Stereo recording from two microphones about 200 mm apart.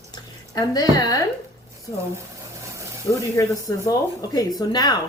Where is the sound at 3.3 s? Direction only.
15° left (ahead or behind).